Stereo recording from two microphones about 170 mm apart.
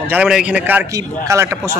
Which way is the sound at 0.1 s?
5° right (ahead or behind).